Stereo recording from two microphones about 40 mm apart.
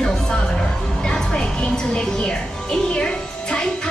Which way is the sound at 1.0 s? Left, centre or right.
Centre.